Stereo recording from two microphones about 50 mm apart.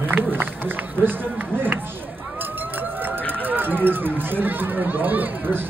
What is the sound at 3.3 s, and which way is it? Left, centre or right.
Chatter, right.